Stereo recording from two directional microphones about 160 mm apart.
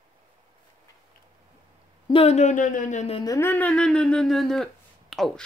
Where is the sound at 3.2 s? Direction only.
25° left (ahead or behind).